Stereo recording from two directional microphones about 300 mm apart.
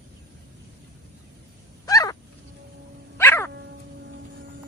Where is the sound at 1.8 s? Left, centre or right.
Centre.